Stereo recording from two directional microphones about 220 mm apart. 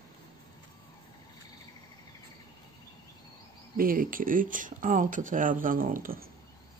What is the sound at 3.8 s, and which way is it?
Speech, 40° right (ahead or behind).